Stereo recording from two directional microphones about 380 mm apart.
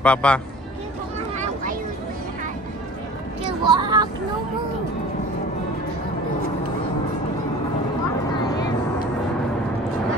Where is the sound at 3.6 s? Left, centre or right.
Centre.